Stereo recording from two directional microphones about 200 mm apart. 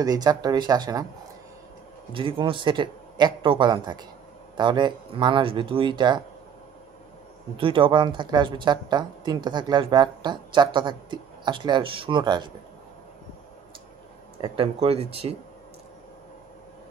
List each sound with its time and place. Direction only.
0.0 s speech: 20° right (ahead or behind)
2.1 s speech: 25° right (ahead or behind)
7.5 s speech: 25° right (ahead or behind)
14.4 s speech: 25° right (ahead or behind)